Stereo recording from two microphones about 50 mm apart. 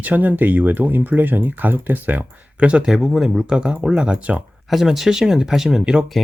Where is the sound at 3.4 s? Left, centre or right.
Centre.